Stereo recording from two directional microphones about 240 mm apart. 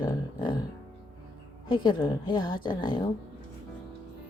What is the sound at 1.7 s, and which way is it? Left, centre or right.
Speech, centre.